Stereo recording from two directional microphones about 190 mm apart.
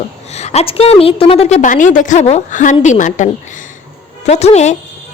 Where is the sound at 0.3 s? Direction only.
35° left (ahead or behind).